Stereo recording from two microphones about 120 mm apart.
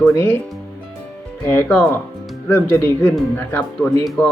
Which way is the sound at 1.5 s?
15° left (ahead or behind).